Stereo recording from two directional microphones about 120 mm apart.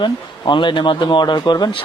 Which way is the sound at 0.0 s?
40° left (ahead or behind).